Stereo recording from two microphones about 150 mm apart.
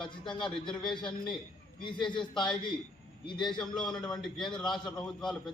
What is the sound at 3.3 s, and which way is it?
A man's voice, 5° left (ahead or behind).